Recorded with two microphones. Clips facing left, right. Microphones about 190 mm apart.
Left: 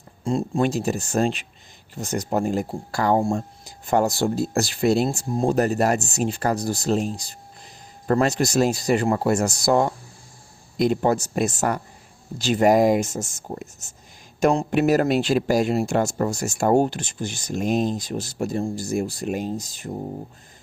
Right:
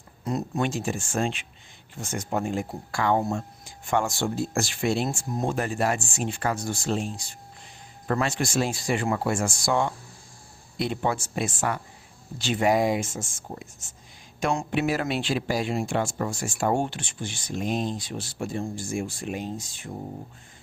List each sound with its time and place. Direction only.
0.3 s speech: 30° left (ahead or behind)